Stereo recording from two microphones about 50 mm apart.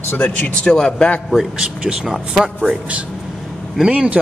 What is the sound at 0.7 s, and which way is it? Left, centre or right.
Speech, centre.